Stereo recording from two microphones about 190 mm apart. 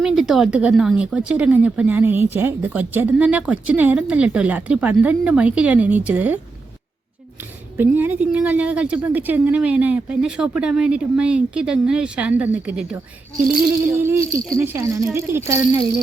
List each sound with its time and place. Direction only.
0.0 s speech: centre (ahead or behind)
7.8 s speech: 10° right (ahead or behind)